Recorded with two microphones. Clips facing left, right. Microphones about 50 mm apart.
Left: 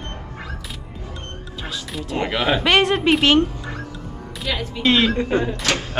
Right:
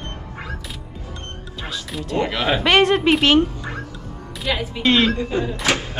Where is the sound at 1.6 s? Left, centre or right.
Centre.